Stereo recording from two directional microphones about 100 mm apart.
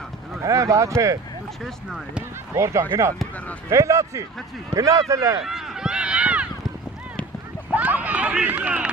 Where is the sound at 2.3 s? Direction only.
30° right (ahead or behind).